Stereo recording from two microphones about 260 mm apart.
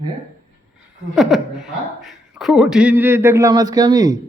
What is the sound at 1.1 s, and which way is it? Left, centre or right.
A woman's voice, centre.